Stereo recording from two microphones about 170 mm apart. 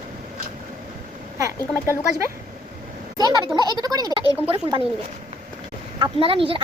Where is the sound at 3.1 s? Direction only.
25° right (ahead or behind).